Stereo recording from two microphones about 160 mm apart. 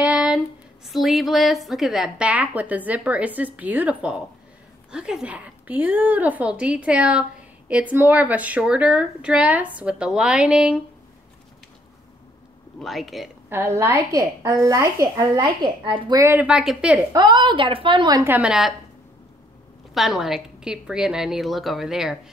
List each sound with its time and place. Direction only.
0.0 s a sound: 5° right (ahead or behind)
0.8 s a woman's voice: centre (ahead or behind)
12.7 s a woman's voice: centre (ahead or behind)
13.5 s a woman's voice: 15° right (ahead or behind); by 16.2 s 30° right (ahead or behind)
16.2 s a woman's voice: 15° right (ahead or behind)
17.1 s a woman's voice: 25° right (ahead or behind)
18.2 s a woman's voice: 10° right (ahead or behind)
19.9 s a woman's voice: centre (ahead or behind)